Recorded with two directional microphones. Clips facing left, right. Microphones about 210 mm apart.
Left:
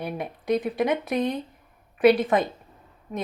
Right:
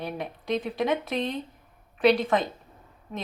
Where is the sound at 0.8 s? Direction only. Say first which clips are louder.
Left 3 dB; 20° left (ahead or behind).